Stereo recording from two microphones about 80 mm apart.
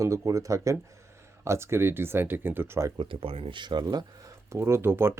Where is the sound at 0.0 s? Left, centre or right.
Right.